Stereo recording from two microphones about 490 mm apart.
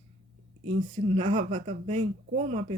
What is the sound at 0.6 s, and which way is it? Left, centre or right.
Speech, centre.